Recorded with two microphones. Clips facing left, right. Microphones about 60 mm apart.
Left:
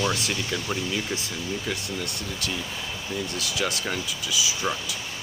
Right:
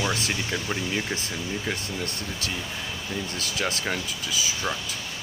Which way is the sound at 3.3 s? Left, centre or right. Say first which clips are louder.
Even; right.